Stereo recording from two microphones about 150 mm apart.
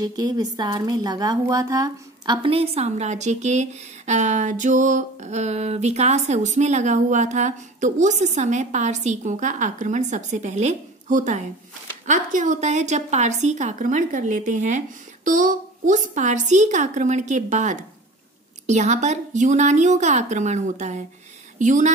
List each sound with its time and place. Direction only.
0.0 s speech: 25° right (ahead or behind); by 21.9 s 55° right (ahead or behind)